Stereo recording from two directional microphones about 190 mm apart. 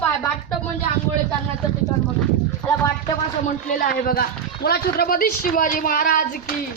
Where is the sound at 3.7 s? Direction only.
50° left (ahead or behind).